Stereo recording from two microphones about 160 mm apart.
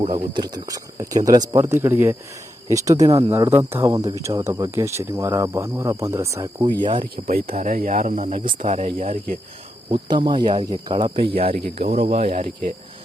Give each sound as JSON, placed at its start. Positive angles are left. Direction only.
{"t": 0.0, "sound": "speech", "side_deg": -30}
{"t": 6.8, "sound": "speech", "side_deg": -30}
{"t": 7.3, "sound": "speech", "side_deg": -65}
{"t": 9.9, "sound": "speech", "side_deg": -30}
{"t": 12.3, "sound": "speech", "side_deg": -50}